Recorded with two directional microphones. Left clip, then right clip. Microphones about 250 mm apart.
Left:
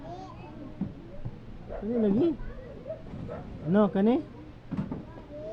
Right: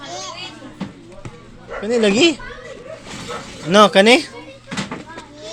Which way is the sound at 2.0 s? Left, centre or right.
Centre.